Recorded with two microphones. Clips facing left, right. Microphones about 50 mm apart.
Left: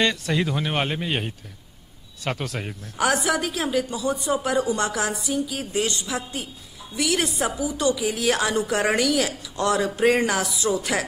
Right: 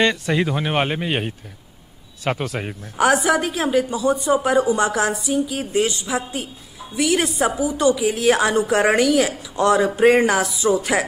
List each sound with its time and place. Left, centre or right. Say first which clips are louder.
0.0 s a woman's voice: right 4 dB; centre